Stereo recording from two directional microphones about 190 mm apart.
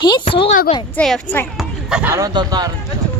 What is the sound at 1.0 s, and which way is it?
Speech, 5° left (ahead or behind).